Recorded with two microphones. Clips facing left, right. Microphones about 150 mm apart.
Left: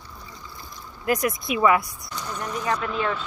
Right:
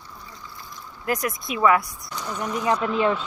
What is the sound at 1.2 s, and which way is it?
Speech, 15° left (ahead or behind).